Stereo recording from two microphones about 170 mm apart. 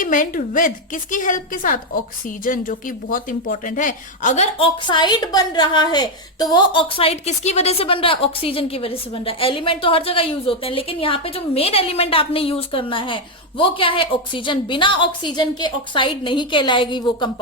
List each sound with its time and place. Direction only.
0.0 s speech: 50° left (ahead or behind)
4.9 s a woman's voice: 25° left (ahead or behind)